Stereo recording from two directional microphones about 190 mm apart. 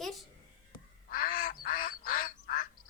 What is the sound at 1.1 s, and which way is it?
Duck, 45° left (ahead or behind).